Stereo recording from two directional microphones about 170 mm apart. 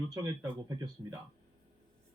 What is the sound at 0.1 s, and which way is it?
Speech, 20° right (ahead or behind).